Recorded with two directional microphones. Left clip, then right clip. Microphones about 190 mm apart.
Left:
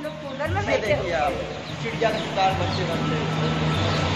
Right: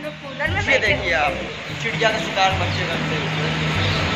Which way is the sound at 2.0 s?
5° right (ahead or behind).